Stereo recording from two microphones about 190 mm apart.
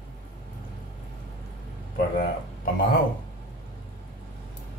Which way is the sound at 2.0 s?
50° left (ahead or behind).